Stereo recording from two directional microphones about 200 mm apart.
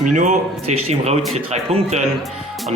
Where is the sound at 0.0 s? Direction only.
40° right (ahead or behind).